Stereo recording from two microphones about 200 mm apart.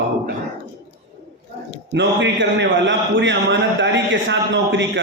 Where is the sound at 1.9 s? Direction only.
60° right (ahead or behind).